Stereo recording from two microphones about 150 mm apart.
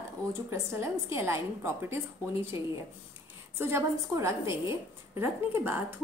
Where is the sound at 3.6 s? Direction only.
20° right (ahead or behind).